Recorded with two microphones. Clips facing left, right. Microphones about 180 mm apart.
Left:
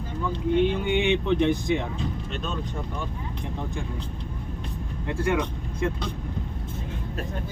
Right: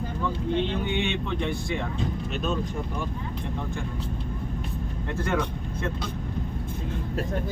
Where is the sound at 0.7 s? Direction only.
15° left (ahead or behind).